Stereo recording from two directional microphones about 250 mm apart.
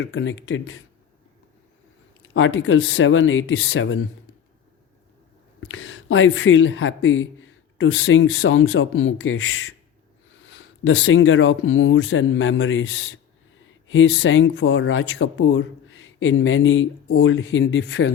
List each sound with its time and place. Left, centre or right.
0.0 s speech: left
2.2 s speech: left
5.5 s speech: left